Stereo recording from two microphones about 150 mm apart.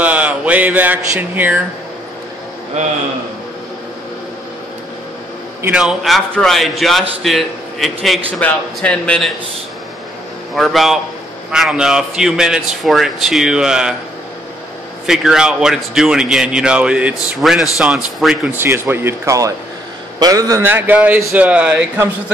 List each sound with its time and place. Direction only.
0.0 s speech: 10° right (ahead or behind)
5.6 s speech: 5° right (ahead or behind)
10.5 s speech: centre (ahead or behind)
15.0 s speech: 5° right (ahead or behind)
18.6 s a man's voice: 15° right (ahead or behind)
20.6 s speech: 15° right (ahead or behind)